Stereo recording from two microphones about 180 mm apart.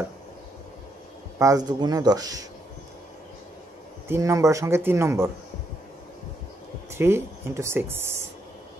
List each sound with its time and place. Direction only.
1.4 s speech: 20° right (ahead or behind)
4.1 s speech: 15° right (ahead or behind)
6.9 s speech: 15° right (ahead or behind)